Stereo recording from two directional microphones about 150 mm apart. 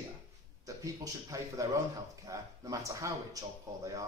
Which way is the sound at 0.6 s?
20° right (ahead or behind).